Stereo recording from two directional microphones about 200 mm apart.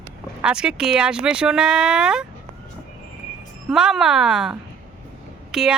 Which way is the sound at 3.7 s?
Centre (ahead or behind).